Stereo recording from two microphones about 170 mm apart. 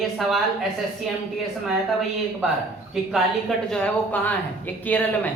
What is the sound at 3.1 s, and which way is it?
Speech, 5° left (ahead or behind).